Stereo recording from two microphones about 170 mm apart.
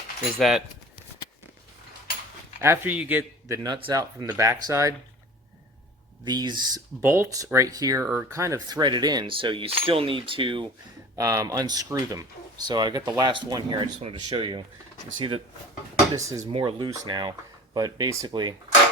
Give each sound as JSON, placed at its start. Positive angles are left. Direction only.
{"t": 0.3, "sound": "speech", "side_deg": 0}
{"t": 2.6, "sound": "speech", "side_deg": -15}
{"t": 3.6, "sound": "speech", "side_deg": -25}
{"t": 6.2, "sound": "speech", "side_deg": -25}
{"t": 7.0, "sound": "speech", "side_deg": -15}
{"t": 11.2, "sound": "speech", "side_deg": -20}
{"t": 16.1, "sound": "speech", "side_deg": -20}
{"t": 16.4, "sound": "speech", "side_deg": -35}